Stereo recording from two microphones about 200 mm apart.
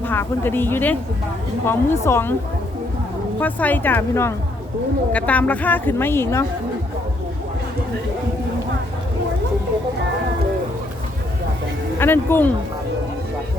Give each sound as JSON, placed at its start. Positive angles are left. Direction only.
{"t": 0.0, "sound": "a woman's voice", "side_deg": 10}
{"t": 3.4, "sound": "a woman's voice", "side_deg": 10}
{"t": 11.9, "sound": "a woman's voice", "side_deg": 10}